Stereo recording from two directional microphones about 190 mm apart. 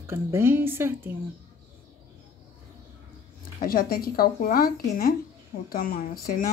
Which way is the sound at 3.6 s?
50° left (ahead or behind).